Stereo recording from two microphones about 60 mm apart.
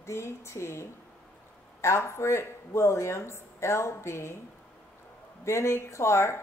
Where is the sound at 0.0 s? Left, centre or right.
Left.